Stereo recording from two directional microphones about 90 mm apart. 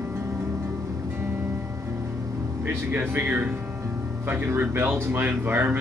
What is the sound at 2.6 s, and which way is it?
Speech, 25° right (ahead or behind).